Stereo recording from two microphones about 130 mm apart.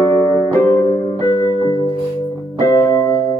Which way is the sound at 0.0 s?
25° left (ahead or behind).